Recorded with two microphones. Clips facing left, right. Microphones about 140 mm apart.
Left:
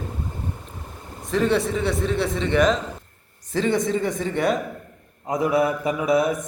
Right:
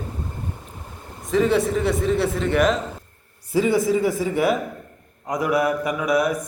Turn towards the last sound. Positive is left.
turn(degrees=25)  # may be behind; listen again after turning